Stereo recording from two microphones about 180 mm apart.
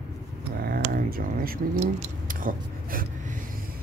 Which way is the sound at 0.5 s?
55° right (ahead or behind).